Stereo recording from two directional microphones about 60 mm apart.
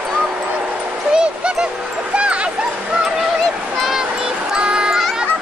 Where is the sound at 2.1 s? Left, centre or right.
Centre.